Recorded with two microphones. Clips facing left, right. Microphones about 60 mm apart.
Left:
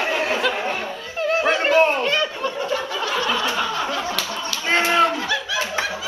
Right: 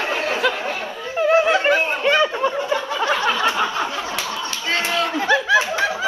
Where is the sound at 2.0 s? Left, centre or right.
Centre.